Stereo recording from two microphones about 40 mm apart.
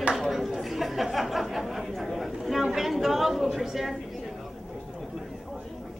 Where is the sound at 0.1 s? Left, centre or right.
Centre.